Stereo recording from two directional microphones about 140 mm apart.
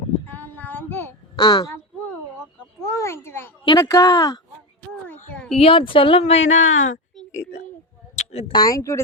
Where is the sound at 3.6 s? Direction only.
25° left (ahead or behind).